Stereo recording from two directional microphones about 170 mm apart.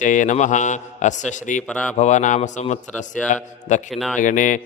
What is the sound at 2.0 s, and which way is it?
A man's voice, 45° left (ahead or behind).